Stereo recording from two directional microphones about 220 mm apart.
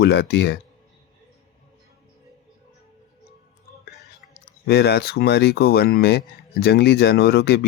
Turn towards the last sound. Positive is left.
turn(degrees=45)  # may be behind; listen again after turning